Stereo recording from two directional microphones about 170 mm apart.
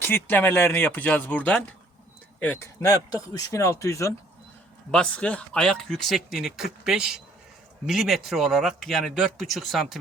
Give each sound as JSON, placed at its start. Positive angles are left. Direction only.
{"t": 0.0, "sound": "speech", "side_deg": 10}
{"t": 4.9, "sound": "speech", "side_deg": 5}